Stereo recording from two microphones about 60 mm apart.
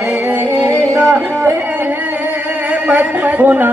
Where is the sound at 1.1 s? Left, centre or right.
Right.